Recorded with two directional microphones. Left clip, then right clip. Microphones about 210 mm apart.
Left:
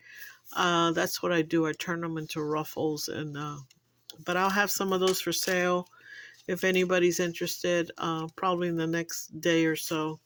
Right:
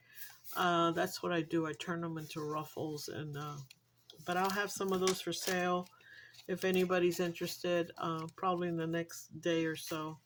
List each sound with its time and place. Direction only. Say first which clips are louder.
0.5 s speech: left 6 dB; 35° left (ahead or behind)